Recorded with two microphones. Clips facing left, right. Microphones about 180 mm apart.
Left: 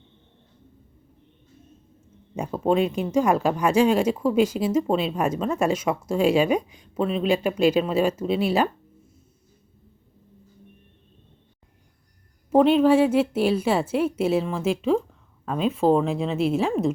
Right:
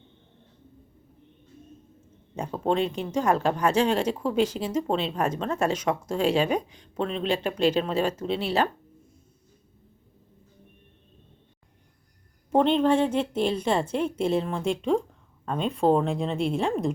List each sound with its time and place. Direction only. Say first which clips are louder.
2.3 s speech: left 4 dB; 10° left (ahead or behind)
12.5 s speech: left 4 dB; 5° left (ahead or behind)